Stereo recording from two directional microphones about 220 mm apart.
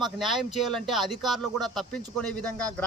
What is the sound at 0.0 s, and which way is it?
Speech, centre (ahead or behind).